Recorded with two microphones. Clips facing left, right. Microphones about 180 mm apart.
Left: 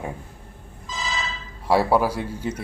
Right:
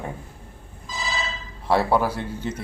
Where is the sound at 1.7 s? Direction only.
10° left (ahead or behind).